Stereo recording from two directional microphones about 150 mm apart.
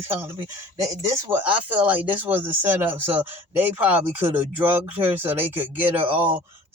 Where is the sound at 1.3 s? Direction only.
10° right (ahead or behind).